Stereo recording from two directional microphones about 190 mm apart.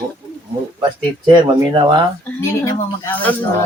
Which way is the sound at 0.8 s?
25° right (ahead or behind).